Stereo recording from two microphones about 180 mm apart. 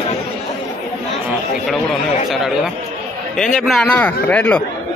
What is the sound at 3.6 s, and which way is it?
Speech, centre (ahead or behind).